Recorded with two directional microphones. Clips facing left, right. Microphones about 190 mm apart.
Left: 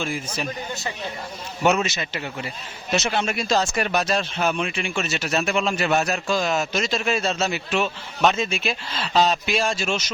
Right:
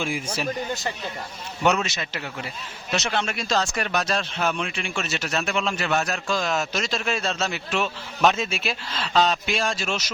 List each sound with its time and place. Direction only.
0.0 s speech: 10° right (ahead or behind)
1.6 s speech: 5° left (ahead or behind)